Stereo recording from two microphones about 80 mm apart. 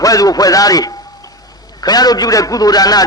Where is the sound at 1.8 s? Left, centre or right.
Left.